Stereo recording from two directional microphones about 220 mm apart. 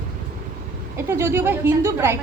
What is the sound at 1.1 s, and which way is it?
A woman's voice, 10° right (ahead or behind).